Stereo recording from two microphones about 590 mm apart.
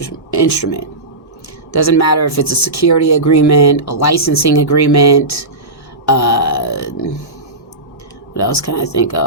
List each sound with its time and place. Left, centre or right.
0.0 s speech: left
8.4 s speech: left